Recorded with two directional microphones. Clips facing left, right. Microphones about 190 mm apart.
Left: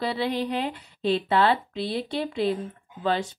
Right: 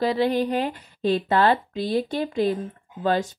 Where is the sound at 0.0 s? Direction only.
45° right (ahead or behind).